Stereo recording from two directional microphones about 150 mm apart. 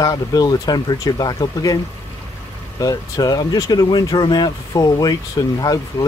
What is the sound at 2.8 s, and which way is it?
Speech, 25° left (ahead or behind).